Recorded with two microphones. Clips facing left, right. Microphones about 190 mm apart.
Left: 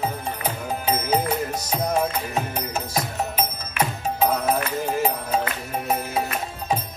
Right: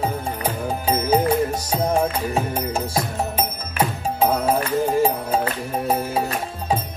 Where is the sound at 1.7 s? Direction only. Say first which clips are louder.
Even; 30° right (ahead or behind).